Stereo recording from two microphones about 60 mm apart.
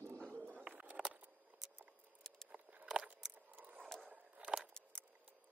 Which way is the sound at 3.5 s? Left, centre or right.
Right.